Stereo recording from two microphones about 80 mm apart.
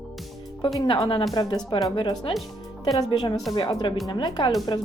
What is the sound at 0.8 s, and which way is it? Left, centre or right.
Speech, left.